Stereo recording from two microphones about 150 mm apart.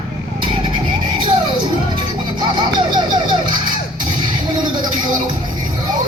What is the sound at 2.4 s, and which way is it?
Music, 30° right (ahead or behind).